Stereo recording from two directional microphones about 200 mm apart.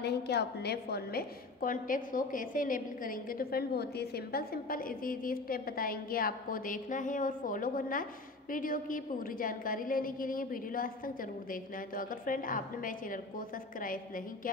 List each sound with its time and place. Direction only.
0.0 s a woman's voice: 55° left (ahead or behind)